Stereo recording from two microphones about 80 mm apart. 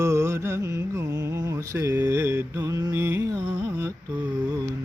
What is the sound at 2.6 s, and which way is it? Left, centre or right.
Mantra, right.